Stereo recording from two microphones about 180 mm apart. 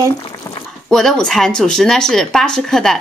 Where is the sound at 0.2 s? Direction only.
25° left (ahead or behind).